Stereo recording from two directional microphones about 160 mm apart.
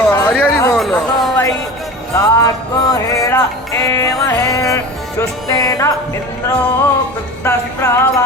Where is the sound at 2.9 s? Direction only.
20° left (ahead or behind).